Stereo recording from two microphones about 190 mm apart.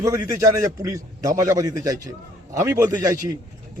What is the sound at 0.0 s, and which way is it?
A man's voice, 15° right (ahead or behind).